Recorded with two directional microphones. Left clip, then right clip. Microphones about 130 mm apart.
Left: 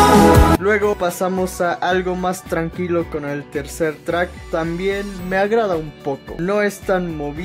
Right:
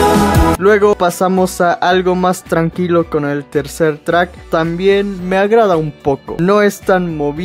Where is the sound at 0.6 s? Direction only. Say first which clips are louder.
Right 7 dB; 35° right (ahead or behind).